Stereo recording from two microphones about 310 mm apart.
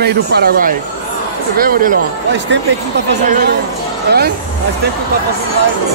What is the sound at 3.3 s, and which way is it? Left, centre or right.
Speech, right.